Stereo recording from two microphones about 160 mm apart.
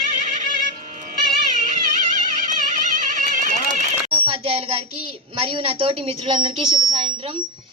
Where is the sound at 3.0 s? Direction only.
55° right (ahead or behind).